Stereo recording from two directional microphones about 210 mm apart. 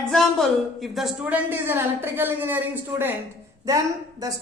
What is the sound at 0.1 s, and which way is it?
A woman's voice, centre (ahead or behind).